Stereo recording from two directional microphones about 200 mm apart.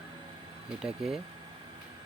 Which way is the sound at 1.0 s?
Centre (ahead or behind).